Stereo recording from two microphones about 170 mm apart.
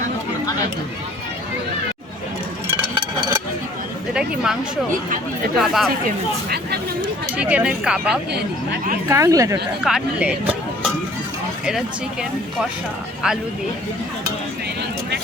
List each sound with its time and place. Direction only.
4.1 s speech: 5° right (ahead or behind)
5.5 s speech: centre (ahead or behind)
7.3 s speech: 10° right (ahead or behind)
8.3 s speech: 75° right (ahead or behind)
9.0 s speech: 15° right (ahead or behind)
9.8 s speech: 5° right (ahead or behind)
13.2 s speech: 5° right (ahead or behind)